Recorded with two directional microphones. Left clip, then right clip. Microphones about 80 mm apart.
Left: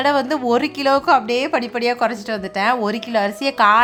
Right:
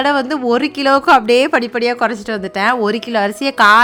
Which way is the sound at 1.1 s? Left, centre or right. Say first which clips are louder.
Right 6 dB; right.